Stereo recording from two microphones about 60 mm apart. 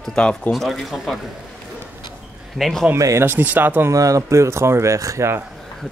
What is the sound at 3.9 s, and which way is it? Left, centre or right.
Speech, right.